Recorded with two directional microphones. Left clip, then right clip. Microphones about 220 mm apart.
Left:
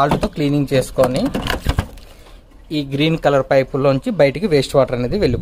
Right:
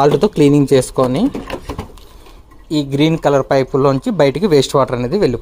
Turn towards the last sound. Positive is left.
turn(degrees=0)  # may be behind; listen again after turning